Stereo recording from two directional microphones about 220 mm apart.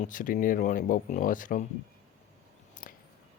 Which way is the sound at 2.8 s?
40° left (ahead or behind).